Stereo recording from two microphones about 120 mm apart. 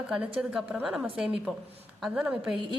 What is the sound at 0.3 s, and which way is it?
A woman's voice, 5° right (ahead or behind).